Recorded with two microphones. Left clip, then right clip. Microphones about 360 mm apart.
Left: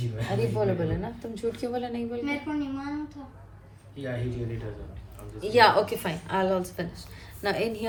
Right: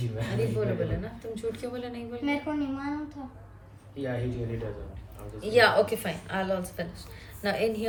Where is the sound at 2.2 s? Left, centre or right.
Right.